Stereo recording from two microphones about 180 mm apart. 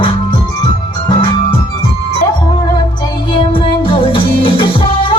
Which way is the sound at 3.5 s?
30° left (ahead or behind).